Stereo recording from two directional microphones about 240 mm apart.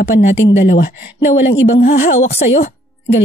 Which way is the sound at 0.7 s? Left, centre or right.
Left.